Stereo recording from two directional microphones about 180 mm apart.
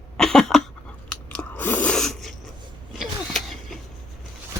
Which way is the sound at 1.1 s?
5° left (ahead or behind).